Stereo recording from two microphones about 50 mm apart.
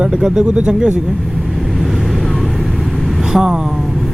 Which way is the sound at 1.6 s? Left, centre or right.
Centre.